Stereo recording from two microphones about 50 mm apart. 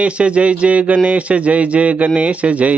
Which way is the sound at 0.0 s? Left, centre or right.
Right.